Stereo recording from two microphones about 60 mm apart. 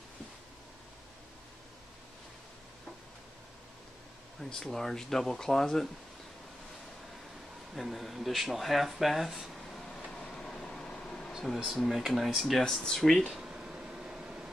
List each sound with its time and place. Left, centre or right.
4.4 s speech: centre
7.7 s speech: centre
10.1 s vehicle: centre
11.3 s speech: centre
13.2 s a sound: centre